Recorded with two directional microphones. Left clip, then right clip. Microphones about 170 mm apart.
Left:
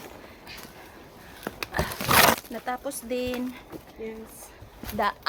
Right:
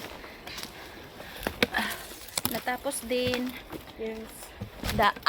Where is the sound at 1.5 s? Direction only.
55° right (ahead or behind).